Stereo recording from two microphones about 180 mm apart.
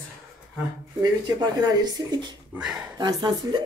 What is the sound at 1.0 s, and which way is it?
Speech, 20° right (ahead or behind).